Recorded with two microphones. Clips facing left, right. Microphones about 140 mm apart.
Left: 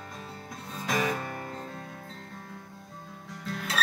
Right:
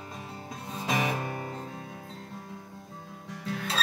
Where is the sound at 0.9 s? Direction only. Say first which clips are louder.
Even; 20° right (ahead or behind).